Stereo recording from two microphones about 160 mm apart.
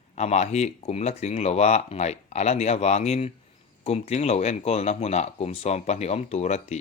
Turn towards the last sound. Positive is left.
turn(degrees=45)  # may be behind; listen again after turning